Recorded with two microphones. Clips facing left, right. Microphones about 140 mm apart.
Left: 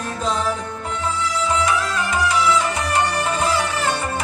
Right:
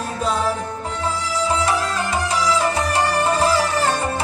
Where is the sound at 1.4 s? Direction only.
35° right (ahead or behind).